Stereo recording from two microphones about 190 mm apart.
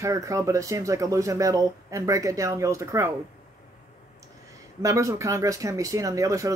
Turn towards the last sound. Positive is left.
turn(degrees=-15)  # may be behind; listen again after turning